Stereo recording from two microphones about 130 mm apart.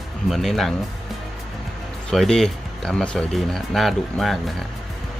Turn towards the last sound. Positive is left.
turn(degrees=0)  # may be behind; listen again after turning